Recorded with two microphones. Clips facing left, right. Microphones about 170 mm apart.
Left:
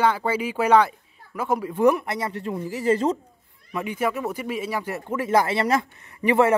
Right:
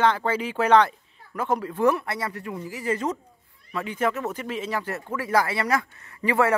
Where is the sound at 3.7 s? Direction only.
15° left (ahead or behind).